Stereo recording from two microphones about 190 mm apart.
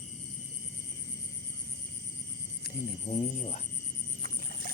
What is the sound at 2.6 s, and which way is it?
Cricket, 40° left (ahead or behind).